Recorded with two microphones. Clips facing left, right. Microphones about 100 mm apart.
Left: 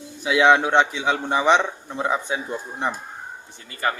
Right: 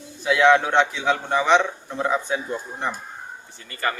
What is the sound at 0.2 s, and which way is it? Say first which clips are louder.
Speech: even; 15° left (ahead or behind).